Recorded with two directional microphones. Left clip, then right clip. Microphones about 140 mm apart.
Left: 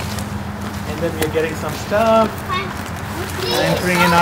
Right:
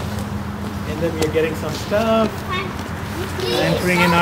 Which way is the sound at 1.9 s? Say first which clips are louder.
Left 4 dB; 5° left (ahead or behind).